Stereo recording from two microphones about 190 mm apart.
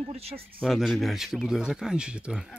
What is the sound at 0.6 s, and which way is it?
Speech, centre (ahead or behind).